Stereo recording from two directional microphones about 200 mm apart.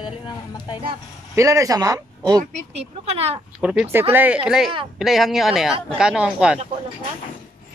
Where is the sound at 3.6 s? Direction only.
5° right (ahead or behind).